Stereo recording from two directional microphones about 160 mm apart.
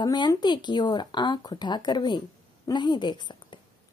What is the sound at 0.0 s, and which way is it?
Speech, 25° left (ahead or behind).